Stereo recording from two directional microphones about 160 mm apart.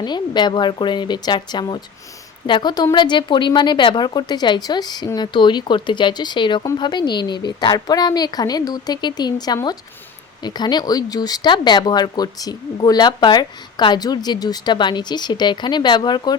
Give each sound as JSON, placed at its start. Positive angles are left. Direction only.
{"t": 0.0, "sound": "speech", "side_deg": 30}